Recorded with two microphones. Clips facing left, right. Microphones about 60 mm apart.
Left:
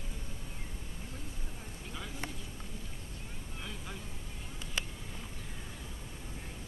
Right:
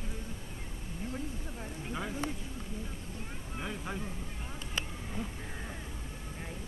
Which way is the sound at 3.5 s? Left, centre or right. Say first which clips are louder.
Right 7 dB; right.